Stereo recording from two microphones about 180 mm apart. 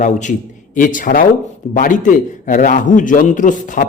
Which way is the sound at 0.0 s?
45° left (ahead or behind).